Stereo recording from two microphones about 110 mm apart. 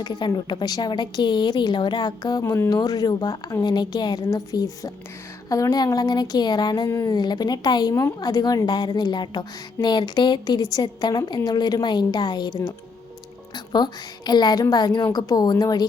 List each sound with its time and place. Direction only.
0.0 s a woman's voice: 40° left (ahead or behind)
6.8 s speech: 25° left (ahead or behind)
7.1 s a woman's voice: 40° left (ahead or behind)
13.7 s a woman's voice: 40° left (ahead or behind)